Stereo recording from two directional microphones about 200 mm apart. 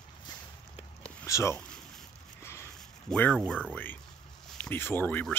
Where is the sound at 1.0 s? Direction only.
15° left (ahead or behind).